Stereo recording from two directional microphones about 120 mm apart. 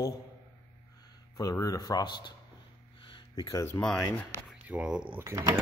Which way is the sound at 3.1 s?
35° left (ahead or behind).